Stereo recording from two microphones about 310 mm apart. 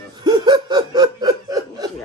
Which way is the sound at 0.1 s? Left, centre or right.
Centre.